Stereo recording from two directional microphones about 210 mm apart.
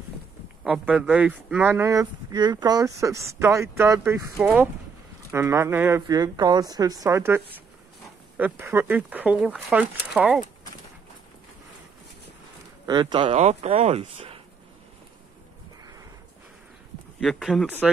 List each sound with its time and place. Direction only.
0.7 s speech: 5° right (ahead or behind)
12.8 s speech: 20° right (ahead or behind)
17.2 s speech: centre (ahead or behind)